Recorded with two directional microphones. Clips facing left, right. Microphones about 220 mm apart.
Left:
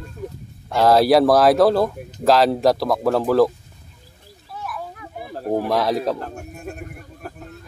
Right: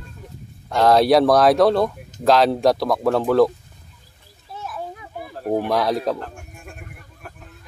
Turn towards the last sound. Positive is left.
turn(degrees=40)  # may be behind; listen again after turning